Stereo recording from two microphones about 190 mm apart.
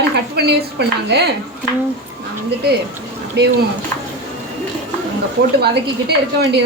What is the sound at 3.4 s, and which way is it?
Speech, 60° right (ahead or behind).